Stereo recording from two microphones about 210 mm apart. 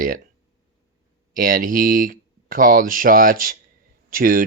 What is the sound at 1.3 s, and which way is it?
Speech, 40° right (ahead or behind).